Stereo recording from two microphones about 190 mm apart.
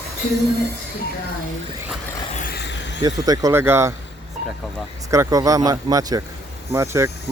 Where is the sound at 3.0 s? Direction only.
20° right (ahead or behind).